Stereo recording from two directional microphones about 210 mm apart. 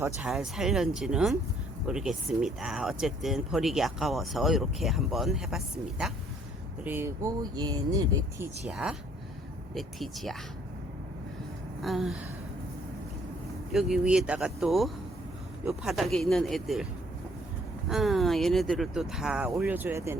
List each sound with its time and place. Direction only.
0.0 s speech: 5° right (ahead or behind)
8.6 s speech: 5° right (ahead or behind)
11.8 s speech: centre (ahead or behind)
13.7 s speech: centre (ahead or behind)
17.8 s speech: centre (ahead or behind)